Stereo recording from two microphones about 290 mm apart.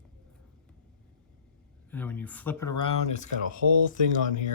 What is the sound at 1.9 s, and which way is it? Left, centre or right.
Speech, centre.